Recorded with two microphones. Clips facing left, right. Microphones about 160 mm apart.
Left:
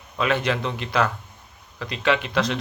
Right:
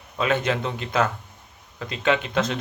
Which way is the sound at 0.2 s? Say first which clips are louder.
Even; 25° right (ahead or behind).